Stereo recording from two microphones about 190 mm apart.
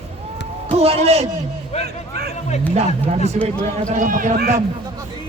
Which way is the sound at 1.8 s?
55° right (ahead or behind).